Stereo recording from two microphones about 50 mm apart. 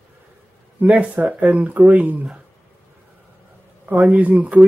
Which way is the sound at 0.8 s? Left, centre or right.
Right.